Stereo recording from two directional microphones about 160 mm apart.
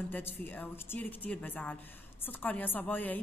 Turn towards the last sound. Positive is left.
turn(degrees=10)  # may be behind; listen again after turning